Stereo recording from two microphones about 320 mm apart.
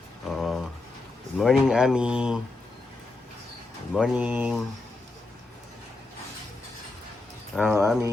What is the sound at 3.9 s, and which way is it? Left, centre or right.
Speech, centre.